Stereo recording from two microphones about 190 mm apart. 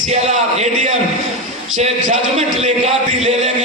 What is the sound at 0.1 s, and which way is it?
A man's voice, 35° right (ahead or behind).